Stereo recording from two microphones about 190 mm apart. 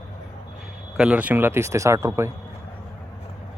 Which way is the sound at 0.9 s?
5° right (ahead or behind).